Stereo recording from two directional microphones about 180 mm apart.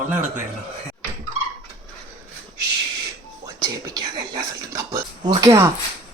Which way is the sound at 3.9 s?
20° right (ahead or behind).